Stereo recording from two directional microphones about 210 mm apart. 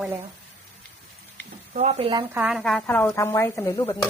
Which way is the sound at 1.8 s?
30° right (ahead or behind).